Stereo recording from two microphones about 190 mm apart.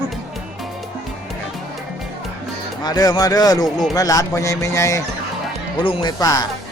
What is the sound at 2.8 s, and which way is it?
Speech, 20° left (ahead or behind).